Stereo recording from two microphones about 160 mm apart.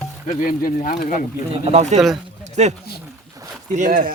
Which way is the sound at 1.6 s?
45° right (ahead or behind).